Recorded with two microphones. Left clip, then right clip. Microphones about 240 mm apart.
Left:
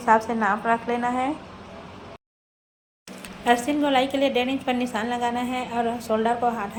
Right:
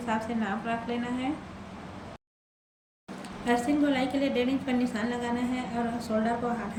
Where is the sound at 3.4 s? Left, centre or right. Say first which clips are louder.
Left 5 dB; centre.